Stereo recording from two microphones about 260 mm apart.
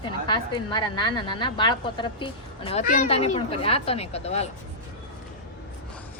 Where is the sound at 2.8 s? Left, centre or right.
Left.